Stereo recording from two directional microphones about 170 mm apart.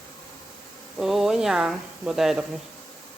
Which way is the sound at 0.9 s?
Centre (ahead or behind).